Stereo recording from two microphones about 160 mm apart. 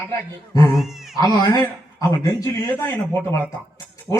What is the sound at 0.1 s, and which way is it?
Speech, 20° left (ahead or behind).